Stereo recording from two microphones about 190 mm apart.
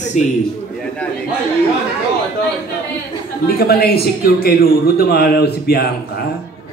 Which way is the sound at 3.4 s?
55° left (ahead or behind).